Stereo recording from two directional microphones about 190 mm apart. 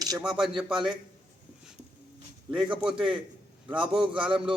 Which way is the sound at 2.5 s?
5° right (ahead or behind).